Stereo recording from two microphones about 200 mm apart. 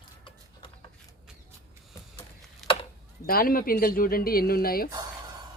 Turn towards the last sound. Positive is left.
turn(degrees=50)  # may be behind; listen again after turning